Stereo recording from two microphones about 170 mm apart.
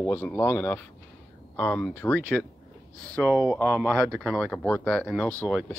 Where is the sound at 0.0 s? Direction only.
15° left (ahead or behind).